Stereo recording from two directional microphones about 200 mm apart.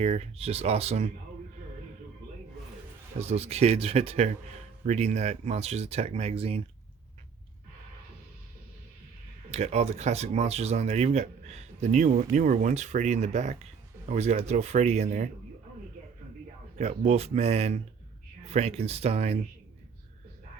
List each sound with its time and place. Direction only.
0.0 s speech: 30° right (ahead or behind)
3.2 s speech: 30° right (ahead or behind)
9.5 s speech: 30° right (ahead or behind)
16.7 s speech: 35° right (ahead or behind)